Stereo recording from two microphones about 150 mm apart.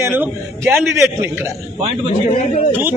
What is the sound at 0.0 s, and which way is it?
Speech, 15° right (ahead or behind).